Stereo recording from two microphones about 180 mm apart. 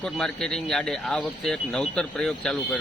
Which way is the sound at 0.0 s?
5° left (ahead or behind).